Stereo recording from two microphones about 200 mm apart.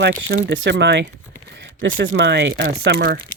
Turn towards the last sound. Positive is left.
turn(degrees=-50)  # may be behind; listen again after turning